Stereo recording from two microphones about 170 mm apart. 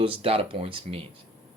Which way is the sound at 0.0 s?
35° right (ahead or behind).